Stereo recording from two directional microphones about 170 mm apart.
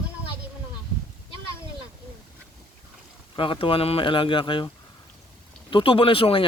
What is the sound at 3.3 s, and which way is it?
Speech, 30° left (ahead or behind).